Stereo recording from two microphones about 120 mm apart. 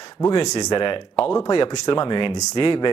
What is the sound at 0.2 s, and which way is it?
Speech, 30° left (ahead or behind).